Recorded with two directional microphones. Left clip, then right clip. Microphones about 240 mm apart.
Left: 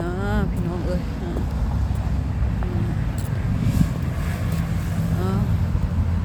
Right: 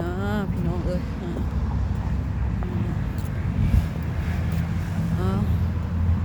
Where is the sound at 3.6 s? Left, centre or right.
Left.